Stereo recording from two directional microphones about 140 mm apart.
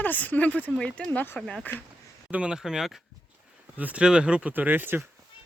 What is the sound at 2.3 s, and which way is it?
Speech, 10° right (ahead or behind).